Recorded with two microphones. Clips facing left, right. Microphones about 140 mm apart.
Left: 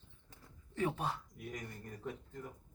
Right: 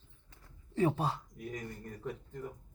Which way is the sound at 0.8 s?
30° right (ahead or behind).